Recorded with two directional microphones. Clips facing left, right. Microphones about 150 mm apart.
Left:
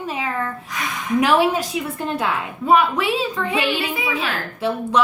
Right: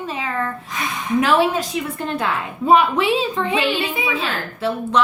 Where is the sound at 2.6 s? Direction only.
25° right (ahead or behind).